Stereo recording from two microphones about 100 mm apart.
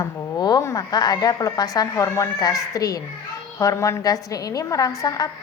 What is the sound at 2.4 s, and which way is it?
A woman's voice, 35° left (ahead or behind).